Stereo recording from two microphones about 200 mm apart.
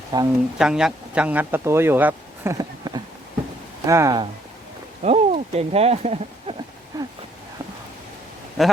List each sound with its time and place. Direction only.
0.1 s speech: 20° right (ahead or behind)
0.6 s speech: 5° right (ahead or behind)
5.0 s speech: 30° right (ahead or behind)
6.9 s a sound: 15° right (ahead or behind)
8.6 s speech: centre (ahead or behind)